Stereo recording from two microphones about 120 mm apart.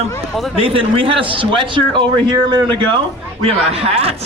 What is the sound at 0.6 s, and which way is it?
A man's voice, 50° right (ahead or behind).